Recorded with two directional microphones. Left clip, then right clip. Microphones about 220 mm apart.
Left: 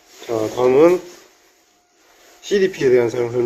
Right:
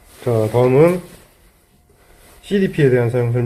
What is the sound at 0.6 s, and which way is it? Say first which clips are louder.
Speech: even; 10° left (ahead or behind).